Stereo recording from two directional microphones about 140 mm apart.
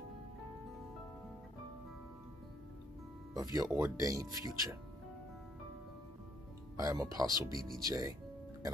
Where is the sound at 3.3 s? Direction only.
25° right (ahead or behind).